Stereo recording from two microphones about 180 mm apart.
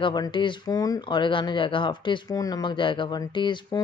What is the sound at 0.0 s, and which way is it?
Speech, 25° left (ahead or behind).